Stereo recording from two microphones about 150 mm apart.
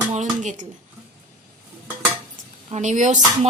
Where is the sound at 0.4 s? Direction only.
55° right (ahead or behind).